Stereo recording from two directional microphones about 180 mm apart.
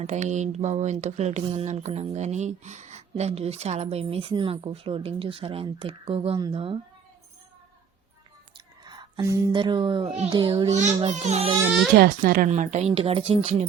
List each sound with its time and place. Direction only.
0.0 s speech: 40° right (ahead or behind)
8.5 s a child's voice: 25° right (ahead or behind)
10.7 s speech: 40° right (ahead or behind)
11.6 s speech: 5° right (ahead or behind)
11.9 s speech: 55° right (ahead or behind); by 13.7 s 35° right (ahead or behind)